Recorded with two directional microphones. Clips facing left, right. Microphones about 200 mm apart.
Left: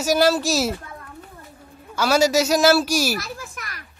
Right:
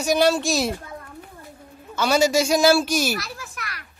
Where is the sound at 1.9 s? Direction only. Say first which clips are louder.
Left 1 dB; 5° left (ahead or behind).